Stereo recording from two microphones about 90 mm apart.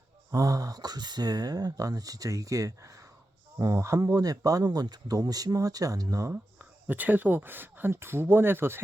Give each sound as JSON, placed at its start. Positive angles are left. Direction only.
{"t": 0.3, "sound": "speech", "side_deg": -40}
{"t": 6.3, "sound": "speech", "side_deg": -20}